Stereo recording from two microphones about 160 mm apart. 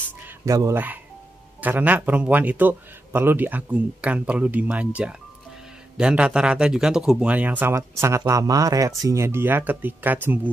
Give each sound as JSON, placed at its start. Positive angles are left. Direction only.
{"t": 0.5, "sound": "a man's voice", "side_deg": -20}